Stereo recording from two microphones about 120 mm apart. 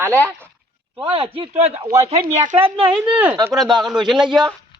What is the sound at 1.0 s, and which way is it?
Speech, 50° right (ahead or behind).